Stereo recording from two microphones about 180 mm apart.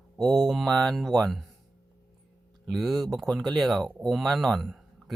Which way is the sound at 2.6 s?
Centre (ahead or behind).